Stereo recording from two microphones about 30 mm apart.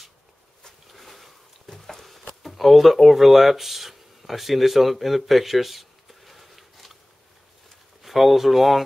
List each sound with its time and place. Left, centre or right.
0.9 s sniff: centre
1.7 s a sound: centre
8.0 s speech: centre